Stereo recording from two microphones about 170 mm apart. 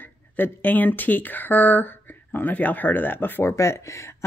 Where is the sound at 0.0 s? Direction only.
10° left (ahead or behind).